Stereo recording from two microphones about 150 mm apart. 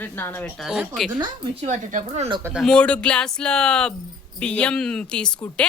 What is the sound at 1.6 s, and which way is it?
Speech, 55° right (ahead or behind).